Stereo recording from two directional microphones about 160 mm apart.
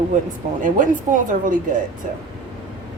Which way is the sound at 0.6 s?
55° right (ahead or behind).